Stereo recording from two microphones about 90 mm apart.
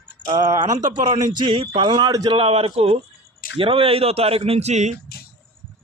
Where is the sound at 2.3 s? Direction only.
85° right.